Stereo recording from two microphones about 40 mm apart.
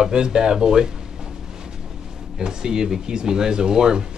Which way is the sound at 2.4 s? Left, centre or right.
Centre.